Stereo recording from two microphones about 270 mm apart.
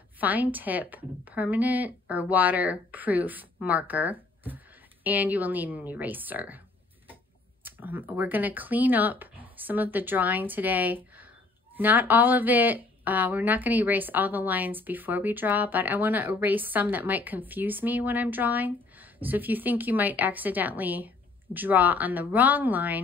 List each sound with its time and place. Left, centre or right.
0.2 s speech: centre
7.6 s speech: centre